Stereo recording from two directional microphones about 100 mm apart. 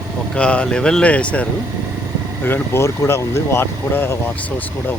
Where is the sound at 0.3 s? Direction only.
10° left (ahead or behind).